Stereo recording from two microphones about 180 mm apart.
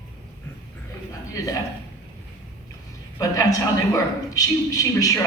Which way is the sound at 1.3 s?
20° left (ahead or behind).